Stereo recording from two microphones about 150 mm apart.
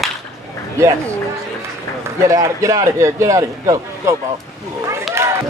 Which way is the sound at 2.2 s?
20° right (ahead or behind).